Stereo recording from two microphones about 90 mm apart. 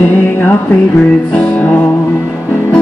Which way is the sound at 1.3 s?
15° left (ahead or behind).